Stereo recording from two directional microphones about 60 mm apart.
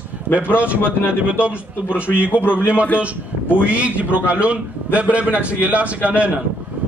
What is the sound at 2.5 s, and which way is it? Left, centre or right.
A man's voice, right.